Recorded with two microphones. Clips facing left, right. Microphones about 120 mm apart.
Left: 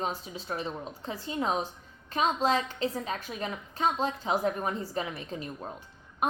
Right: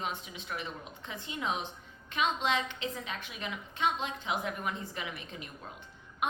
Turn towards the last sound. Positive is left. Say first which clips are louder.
# left 8 dB
turn(degrees=40)  # may be behind; listen again after turning